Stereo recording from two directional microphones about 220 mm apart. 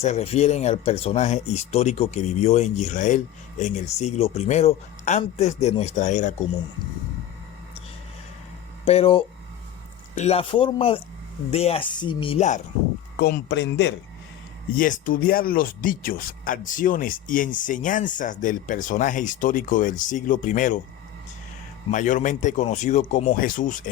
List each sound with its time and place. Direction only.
0.0 s speech: 30° left (ahead or behind)
8.8 s speech: 25° left (ahead or behind)
13.1 s speech: 45° left (ahead or behind)
14.8 s speech: 35° left (ahead or behind)
21.8 s speech: 35° left (ahead or behind)